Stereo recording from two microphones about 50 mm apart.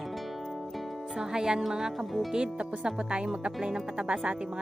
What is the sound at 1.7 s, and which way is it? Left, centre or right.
Speech, centre.